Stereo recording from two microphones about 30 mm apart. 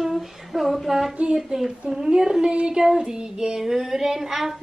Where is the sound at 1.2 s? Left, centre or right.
Right.